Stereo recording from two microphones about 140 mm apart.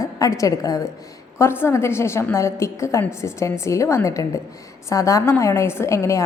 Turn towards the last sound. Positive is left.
turn(degrees=20)  # may be behind; listen again after turning